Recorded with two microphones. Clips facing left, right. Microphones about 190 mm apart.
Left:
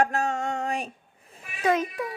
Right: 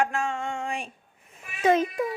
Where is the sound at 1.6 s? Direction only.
25° right (ahead or behind).